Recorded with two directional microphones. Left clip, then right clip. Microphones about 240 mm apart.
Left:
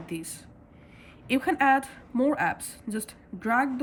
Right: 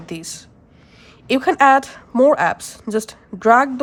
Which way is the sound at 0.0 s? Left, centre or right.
Centre.